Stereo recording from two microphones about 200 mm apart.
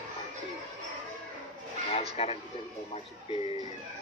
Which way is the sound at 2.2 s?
30° left (ahead or behind).